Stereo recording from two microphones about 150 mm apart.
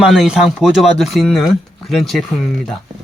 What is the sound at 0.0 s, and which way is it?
Speech, 5° right (ahead or behind).